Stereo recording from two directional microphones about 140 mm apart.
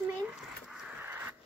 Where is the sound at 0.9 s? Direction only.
15° right (ahead or behind).